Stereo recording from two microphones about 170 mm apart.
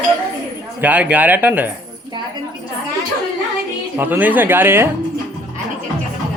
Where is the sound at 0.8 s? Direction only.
10° right (ahead or behind).